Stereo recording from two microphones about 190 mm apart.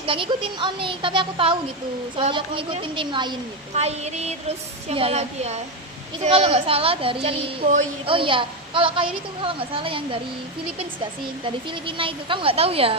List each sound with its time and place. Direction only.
0.0 s a woman's voice: 30° right (ahead or behind)
3.8 s a woman's voice: 35° right (ahead or behind)
7.6 s speech: 40° right (ahead or behind)
8.0 s a woman's voice: 25° right (ahead or behind)
11.4 s a woman's voice: 25° right (ahead or behind)